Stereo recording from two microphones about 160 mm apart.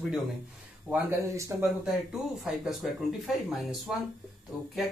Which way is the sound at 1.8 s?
5° right (ahead or behind).